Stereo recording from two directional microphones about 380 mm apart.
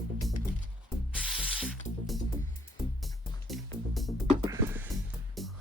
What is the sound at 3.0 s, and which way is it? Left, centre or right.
Music, centre.